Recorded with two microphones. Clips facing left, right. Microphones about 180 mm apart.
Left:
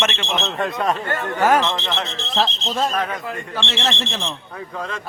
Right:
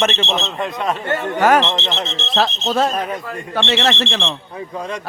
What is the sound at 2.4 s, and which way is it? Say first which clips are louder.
Speech: right 4 dB; 70° right (ahead or behind).